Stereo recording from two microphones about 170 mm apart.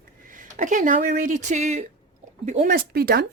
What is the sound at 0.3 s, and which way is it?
A woman's voice, 50° right (ahead or behind).